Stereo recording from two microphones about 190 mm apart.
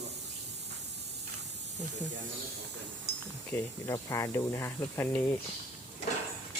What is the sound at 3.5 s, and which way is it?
Speech, 15° left (ahead or behind).